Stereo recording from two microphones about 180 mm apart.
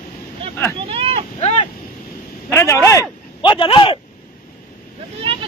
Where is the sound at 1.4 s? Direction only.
35° left (ahead or behind).